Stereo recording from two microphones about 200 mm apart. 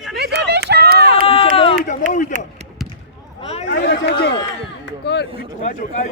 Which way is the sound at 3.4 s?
30° left (ahead or behind).